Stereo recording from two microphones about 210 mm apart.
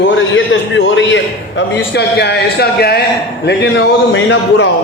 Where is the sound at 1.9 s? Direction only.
50° left (ahead or behind).